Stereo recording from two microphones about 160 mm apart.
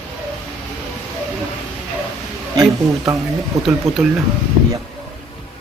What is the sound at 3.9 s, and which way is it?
Speech, centre (ahead or behind).